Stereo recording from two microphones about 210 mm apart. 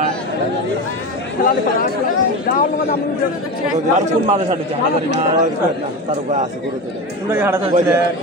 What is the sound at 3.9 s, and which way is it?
Speech, 30° right (ahead or behind).